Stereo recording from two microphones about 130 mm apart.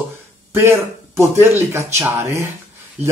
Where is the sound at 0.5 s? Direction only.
20° right (ahead or behind).